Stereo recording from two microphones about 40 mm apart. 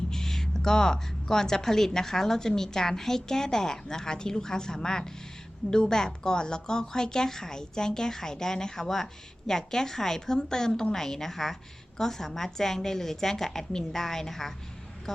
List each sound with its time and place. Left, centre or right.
0.1 s a woman's voice: centre